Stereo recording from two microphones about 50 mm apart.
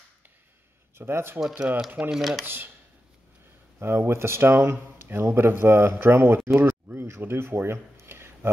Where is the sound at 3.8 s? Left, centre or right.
Right.